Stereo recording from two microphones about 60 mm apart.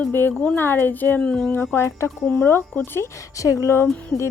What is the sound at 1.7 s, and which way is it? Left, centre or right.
Speech, left.